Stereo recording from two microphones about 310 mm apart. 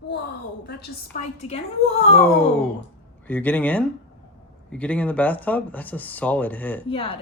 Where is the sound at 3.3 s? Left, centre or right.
Centre.